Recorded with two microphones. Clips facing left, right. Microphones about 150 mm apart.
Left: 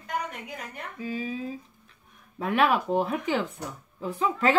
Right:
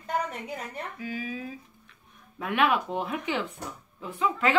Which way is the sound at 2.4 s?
35° left (ahead or behind).